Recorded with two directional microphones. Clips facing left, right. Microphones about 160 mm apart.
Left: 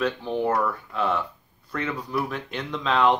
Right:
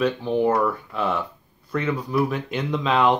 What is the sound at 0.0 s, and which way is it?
Speech, 5° right (ahead or behind).